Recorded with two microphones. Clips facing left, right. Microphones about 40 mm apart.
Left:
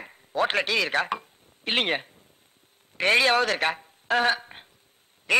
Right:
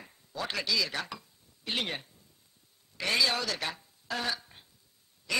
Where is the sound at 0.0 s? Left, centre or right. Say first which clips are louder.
Left 12 dB; left.